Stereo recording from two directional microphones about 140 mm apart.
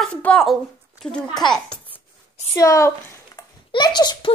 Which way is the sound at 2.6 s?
20° left (ahead or behind).